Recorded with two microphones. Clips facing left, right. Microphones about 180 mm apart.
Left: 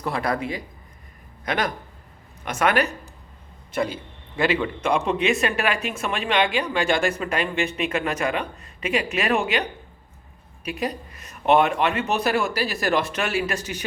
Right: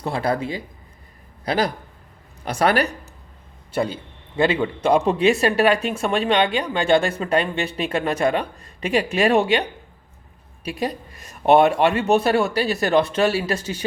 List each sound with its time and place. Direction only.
0.0 s a woman's voice: 30° right (ahead or behind)
10.7 s a woman's voice: 35° right (ahead or behind)